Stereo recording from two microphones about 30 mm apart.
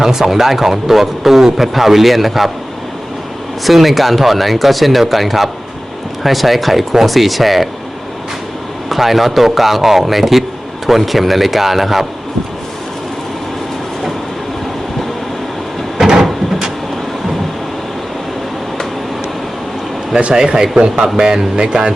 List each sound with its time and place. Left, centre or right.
0.0 s a man's voice: centre
3.6 s speech: centre
8.9 s a man's voice: centre
16.0 s a sound: centre
20.3 s speech: right